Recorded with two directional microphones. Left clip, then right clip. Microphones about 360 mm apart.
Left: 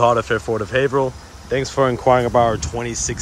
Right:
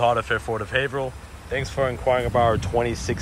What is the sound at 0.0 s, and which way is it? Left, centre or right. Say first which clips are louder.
Speech: left 5 dB; left.